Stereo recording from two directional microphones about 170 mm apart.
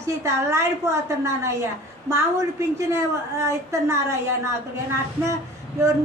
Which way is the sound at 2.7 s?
15° right (ahead or behind).